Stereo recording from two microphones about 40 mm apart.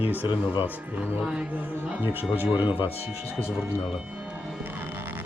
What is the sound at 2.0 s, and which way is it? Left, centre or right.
Speech, right.